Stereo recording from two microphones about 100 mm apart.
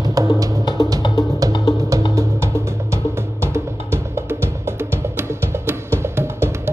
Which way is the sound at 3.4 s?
25° right (ahead or behind).